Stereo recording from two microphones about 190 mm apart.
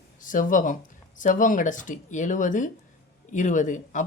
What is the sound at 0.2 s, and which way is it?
Speech, 45° left (ahead or behind).